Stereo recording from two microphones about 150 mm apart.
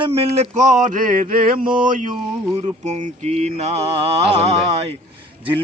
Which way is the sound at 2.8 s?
50° right (ahead or behind).